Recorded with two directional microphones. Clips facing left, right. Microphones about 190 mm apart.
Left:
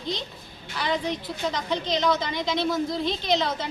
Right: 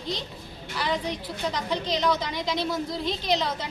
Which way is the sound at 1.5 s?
10° right (ahead or behind).